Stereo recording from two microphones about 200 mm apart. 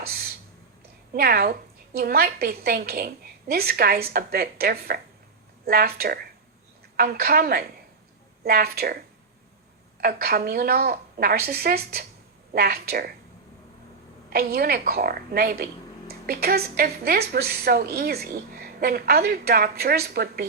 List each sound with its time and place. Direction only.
1.1 s a woman's voice: 50° right (ahead or behind)
14.3 s a woman's voice: 50° right (ahead or behind)